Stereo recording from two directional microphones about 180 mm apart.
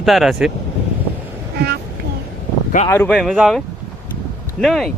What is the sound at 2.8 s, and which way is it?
Speech, 15° left (ahead or behind).